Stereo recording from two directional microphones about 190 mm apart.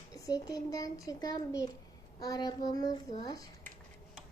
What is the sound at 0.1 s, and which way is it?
A child's voice, 20° left (ahead or behind).